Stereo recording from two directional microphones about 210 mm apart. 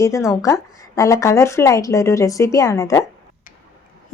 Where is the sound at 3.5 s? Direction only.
40° left (ahead or behind).